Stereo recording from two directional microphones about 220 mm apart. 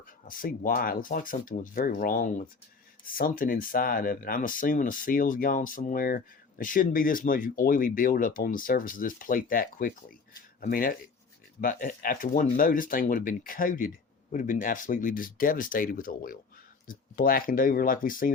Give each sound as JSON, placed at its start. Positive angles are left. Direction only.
{"t": 0.3, "sound": "speech", "side_deg": 40}